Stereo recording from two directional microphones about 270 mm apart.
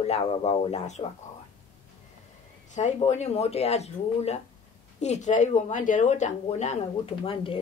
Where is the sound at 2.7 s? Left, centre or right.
Left.